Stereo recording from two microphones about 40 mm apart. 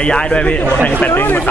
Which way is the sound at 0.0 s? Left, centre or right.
Left.